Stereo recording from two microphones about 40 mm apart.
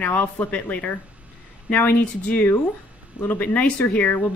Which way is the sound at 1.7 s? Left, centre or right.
Left.